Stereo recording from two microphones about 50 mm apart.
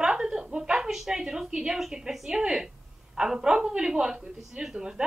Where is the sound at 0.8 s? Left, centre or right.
Centre.